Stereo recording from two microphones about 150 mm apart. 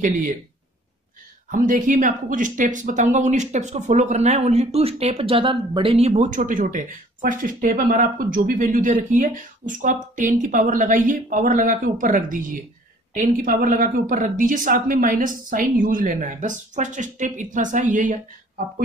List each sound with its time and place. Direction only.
0.0 s speech: 60° right (ahead or behind)
1.5 s speech: 60° right (ahead or behind)